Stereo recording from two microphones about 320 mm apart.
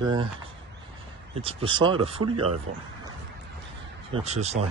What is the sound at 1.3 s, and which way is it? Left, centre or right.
Speech, centre.